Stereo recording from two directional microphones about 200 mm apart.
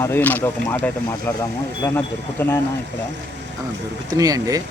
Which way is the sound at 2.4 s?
10° left (ahead or behind).